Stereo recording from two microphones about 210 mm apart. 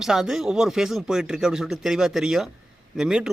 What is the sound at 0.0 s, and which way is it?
Speech, centre (ahead or behind).